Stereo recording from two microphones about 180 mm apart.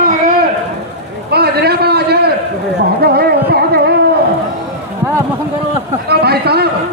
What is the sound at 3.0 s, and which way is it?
Music, 60° right (ahead or behind).